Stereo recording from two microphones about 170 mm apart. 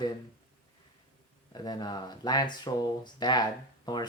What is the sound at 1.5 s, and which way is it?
Speech, 25° left (ahead or behind).